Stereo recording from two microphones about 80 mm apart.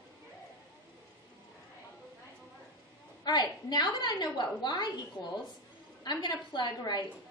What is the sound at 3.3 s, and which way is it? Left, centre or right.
A woman's voice, left.